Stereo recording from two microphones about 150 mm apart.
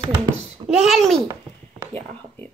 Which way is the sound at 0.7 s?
Centre (ahead or behind).